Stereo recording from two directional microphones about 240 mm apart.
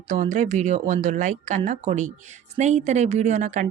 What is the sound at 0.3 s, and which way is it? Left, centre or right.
Speech, right.